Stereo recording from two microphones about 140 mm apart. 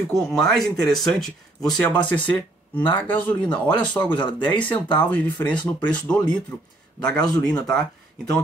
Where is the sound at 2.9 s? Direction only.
10° left (ahead or behind).